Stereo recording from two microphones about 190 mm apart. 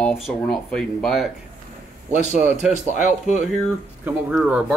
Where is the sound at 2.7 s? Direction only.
40° left (ahead or behind).